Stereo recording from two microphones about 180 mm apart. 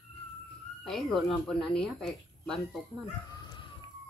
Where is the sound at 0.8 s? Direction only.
Centre (ahead or behind).